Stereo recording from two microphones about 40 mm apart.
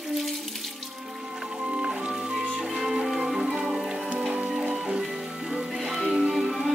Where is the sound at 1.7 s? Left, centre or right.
Right; by 3.8 s centre.